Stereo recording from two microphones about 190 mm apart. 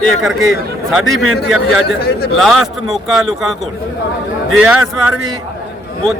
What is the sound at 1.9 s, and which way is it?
Speech, 55° left (ahead or behind).